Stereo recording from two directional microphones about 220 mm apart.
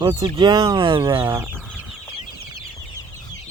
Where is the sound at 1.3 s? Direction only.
10° right (ahead or behind).